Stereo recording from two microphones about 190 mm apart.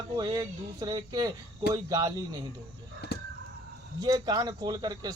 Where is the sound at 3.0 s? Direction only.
60° left (ahead or behind).